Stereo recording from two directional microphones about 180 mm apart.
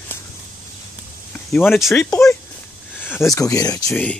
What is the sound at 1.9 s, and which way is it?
Speech, 15° left (ahead or behind).